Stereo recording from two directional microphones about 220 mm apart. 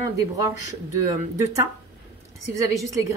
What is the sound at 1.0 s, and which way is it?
Speech, 15° right (ahead or behind).